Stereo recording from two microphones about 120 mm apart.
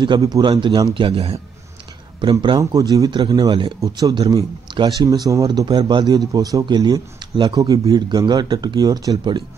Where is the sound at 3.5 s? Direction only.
45° right (ahead or behind).